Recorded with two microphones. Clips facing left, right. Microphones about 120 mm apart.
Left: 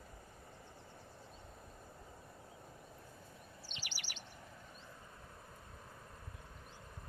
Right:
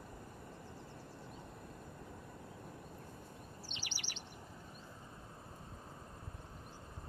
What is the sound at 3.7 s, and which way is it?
Chirp, 25° right (ahead or behind).